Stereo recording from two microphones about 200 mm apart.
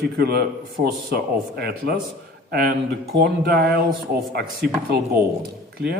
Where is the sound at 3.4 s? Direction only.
50° right (ahead or behind).